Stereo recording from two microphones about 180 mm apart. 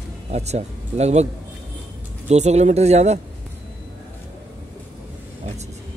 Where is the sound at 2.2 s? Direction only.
40° right (ahead or behind).